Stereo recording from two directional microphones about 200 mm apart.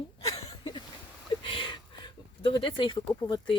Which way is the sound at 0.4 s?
30° left (ahead or behind).